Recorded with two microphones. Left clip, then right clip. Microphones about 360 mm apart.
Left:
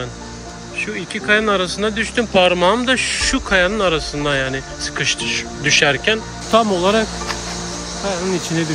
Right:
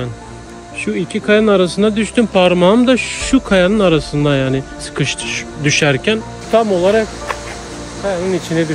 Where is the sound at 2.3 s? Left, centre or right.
Right.